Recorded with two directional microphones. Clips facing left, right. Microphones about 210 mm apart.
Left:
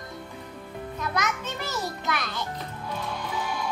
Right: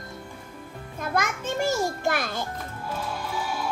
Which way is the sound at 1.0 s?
50° right (ahead or behind).